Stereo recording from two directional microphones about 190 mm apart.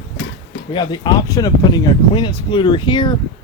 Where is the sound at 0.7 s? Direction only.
25° left (ahead or behind).